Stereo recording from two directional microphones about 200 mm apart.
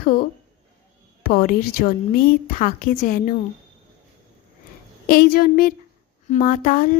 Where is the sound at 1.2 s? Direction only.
45° left (ahead or behind).